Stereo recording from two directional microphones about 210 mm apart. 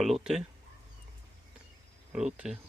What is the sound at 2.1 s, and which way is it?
Speech, 5° right (ahead or behind).